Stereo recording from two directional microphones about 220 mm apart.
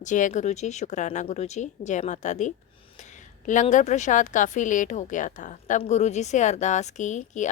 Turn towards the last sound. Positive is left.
turn(degrees=35)  # may be behind; listen again after turning